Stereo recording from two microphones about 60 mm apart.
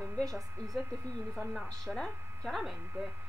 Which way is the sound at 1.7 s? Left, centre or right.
Centre.